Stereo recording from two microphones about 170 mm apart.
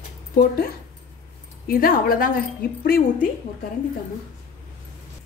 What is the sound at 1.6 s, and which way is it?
A woman's voice, 60° left (ahead or behind).